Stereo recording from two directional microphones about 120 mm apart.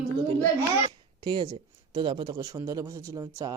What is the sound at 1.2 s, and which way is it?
A man's voice, 40° right (ahead or behind).